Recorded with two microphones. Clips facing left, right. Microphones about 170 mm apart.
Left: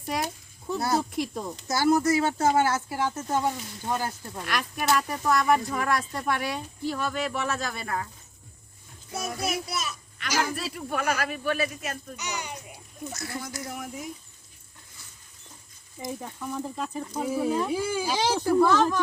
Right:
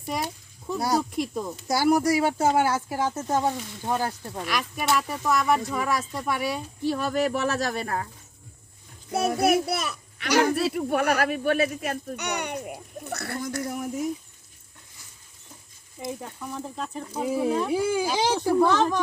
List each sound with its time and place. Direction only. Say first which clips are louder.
0.0 s a sound: even; centre (ahead or behind)
0.8 s speech: right 2 dB; 10° right (ahead or behind)
1.1 s speech: right 2 dB; centre (ahead or behind)
1.5 s speech: right 1 dB; 10° right (ahead or behind)
4.4 s speech: even; centre (ahead or behind)
6.8 s speech: right 5 dB; 35° right (ahead or behind)
9.1 s a child's voice: right 9 dB; 60° right (ahead or behind); by 14.1 s 40° right (ahead or behind)
16.0 s speech: right 1 dB; 5° right (ahead or behind)
17.2 s speech: right 2 dB; 15° right (ahead or behind)